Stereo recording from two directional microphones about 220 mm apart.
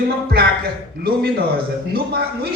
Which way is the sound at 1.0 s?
45° right (ahead or behind).